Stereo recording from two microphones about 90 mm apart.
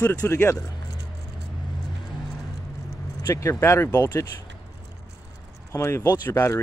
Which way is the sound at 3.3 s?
35° left (ahead or behind).